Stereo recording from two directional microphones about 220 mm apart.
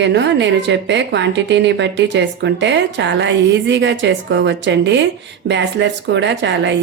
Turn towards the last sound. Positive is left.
turn(degrees=-55)  # may be behind; listen again after turning